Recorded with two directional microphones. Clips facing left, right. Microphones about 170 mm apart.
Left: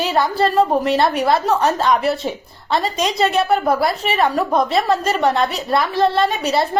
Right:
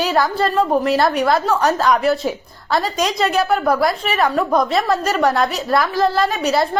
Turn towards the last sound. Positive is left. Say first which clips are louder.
# even
turn(degrees=0)  # may be behind; listen again after turning